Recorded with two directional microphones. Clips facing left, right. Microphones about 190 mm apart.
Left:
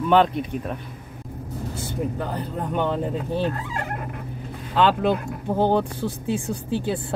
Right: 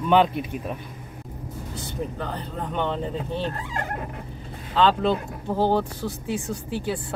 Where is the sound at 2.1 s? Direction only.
10° left (ahead or behind).